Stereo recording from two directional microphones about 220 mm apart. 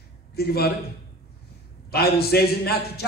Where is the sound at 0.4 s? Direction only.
45° left (ahead or behind).